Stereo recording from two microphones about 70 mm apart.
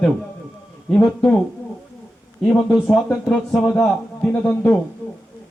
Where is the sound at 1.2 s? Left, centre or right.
Centre.